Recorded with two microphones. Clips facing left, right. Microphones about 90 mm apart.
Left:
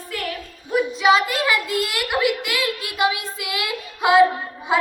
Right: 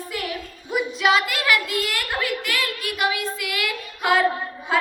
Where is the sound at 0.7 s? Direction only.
5° right (ahead or behind).